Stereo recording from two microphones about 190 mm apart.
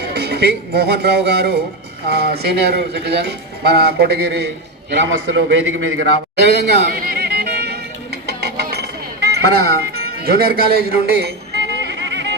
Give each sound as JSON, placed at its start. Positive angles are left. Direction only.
{"t": 0.1, "sound": "speech", "side_deg": -60}
{"t": 4.9, "sound": "a man's voice", "side_deg": -75}
{"t": 7.0, "sound": "music", "side_deg": -55}